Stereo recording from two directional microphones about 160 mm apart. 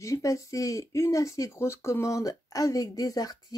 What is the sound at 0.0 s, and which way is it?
Speech, 20° left (ahead or behind).